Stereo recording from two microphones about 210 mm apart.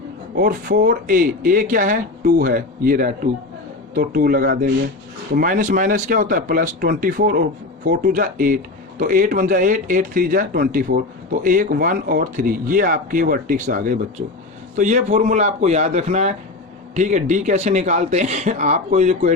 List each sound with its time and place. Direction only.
0.3 s speech: 45° right (ahead or behind)